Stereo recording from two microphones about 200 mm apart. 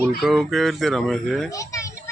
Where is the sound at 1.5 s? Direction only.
15° left (ahead or behind).